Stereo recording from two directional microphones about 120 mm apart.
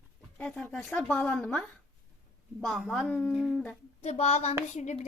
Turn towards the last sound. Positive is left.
turn(degrees=75)  # may be behind; listen again after turning